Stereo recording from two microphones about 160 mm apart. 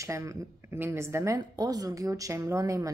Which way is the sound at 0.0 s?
20° right (ahead or behind).